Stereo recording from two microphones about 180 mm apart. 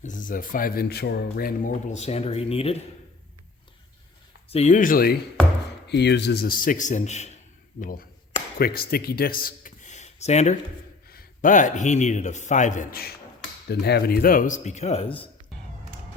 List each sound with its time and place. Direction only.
0.0 s speech: 45° left (ahead or behind)
4.4 s speech: 35° left (ahead or behind); by 5.2 s 55° left (ahead or behind)
5.9 s speech: 70° left (ahead or behind); by 7.3 s 40° left (ahead or behind)
7.8 s speech: 50° left (ahead or behind)
11.1 s speech: 50° left (ahead or behind); by 15.3 s 30° left (ahead or behind)